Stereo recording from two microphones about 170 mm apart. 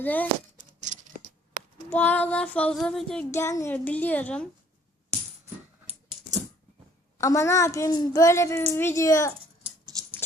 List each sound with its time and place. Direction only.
0.0 s a woman's voice: 10° left (ahead or behind)
0.6 s a sound: 45° right (ahead or behind)
1.9 s a woman's voice: 10° left (ahead or behind)
3.3 s a woman's voice: 15° left (ahead or behind)
5.8 s dog: 40° right (ahead or behind)
7.2 s a woman's voice: 20° left (ahead or behind)
9.8 s dog: 25° right (ahead or behind)